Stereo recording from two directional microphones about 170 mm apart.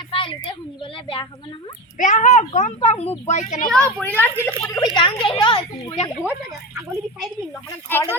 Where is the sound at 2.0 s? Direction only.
45° left (ahead or behind).